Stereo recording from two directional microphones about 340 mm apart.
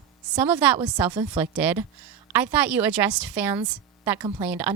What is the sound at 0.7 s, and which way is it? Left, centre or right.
Speech, centre.